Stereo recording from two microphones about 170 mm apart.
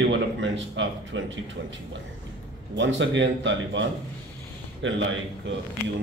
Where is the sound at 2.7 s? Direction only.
90° right.